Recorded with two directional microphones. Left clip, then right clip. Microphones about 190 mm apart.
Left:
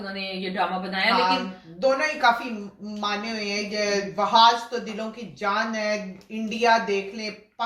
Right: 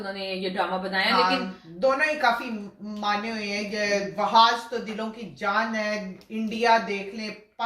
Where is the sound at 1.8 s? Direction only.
20° right (ahead or behind).